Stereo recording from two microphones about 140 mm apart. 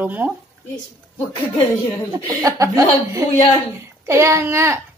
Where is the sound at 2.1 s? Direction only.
25° right (ahead or behind).